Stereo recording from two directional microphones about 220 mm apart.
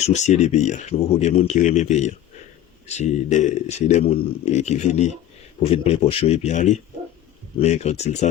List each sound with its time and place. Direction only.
0.0 s speech: 30° left (ahead or behind)